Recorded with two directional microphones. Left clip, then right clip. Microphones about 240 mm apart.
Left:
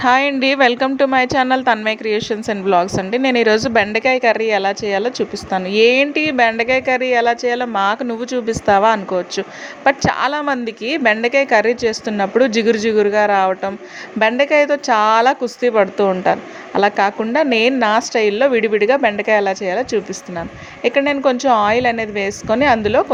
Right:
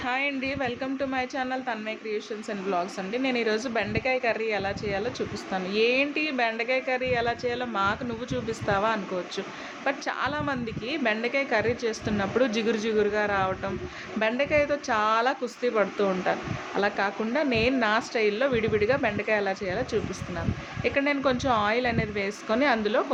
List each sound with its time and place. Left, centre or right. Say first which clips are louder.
0.0 s a woman's voice: left 14 dB; left